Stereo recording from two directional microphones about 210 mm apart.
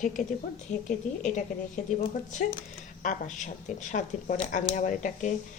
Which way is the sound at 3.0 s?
35° left (ahead or behind).